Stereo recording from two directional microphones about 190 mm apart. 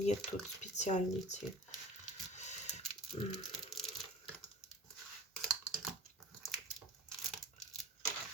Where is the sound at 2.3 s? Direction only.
35° left (ahead or behind).